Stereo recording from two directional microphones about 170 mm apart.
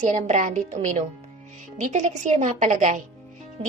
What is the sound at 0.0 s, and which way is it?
A woman's voice, 45° right (ahead or behind).